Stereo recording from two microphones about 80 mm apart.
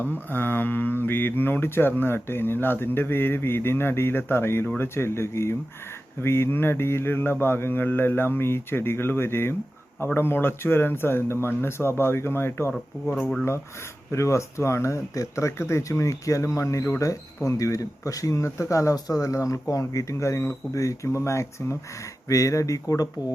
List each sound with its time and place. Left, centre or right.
0.0 s speech: left
14.1 s speech: left